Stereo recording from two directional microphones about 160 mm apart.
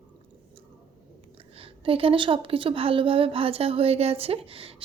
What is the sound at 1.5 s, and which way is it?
A woman's voice, 35° right (ahead or behind).